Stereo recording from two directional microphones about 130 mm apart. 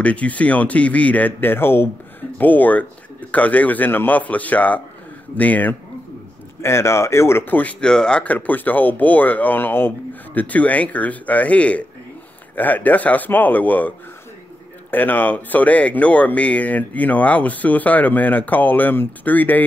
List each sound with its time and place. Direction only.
0.0 s speech: 10° left (ahead or behind)